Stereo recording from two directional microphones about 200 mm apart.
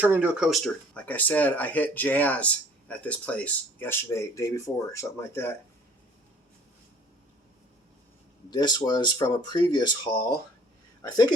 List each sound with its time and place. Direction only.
0.0 s speech: 10° right (ahead or behind); by 5.5 s 10° left (ahead or behind)
8.4 s speech: 20° left (ahead or behind)